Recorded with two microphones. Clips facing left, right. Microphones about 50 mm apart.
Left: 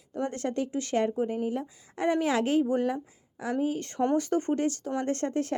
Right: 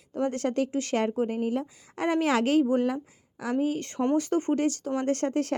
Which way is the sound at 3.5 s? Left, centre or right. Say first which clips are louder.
Right 1 dB; right.